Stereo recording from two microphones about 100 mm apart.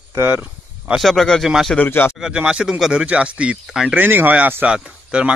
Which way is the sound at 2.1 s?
5° right (ahead or behind).